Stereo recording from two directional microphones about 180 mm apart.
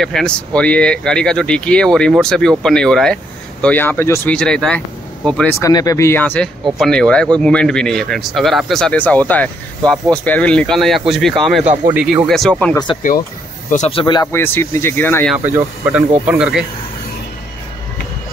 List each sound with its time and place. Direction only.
0.0 s speech: 5° left (ahead or behind)
5.6 s speech: 20° left (ahead or behind); by 11.6 s centre (ahead or behind)
11.6 s speech: 40° right (ahead or behind)
11.9 s speech: 10° right (ahead or behind)
13.7 s speech: 40° left (ahead or behind)
14.2 s speech: 15° left (ahead or behind)
15.3 s speech: 10° right (ahead or behind)